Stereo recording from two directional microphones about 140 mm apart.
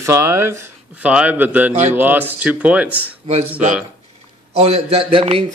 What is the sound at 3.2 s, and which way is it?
Speech, 50° right (ahead or behind).